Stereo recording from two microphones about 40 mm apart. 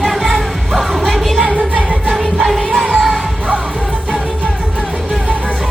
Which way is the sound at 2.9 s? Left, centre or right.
Centre.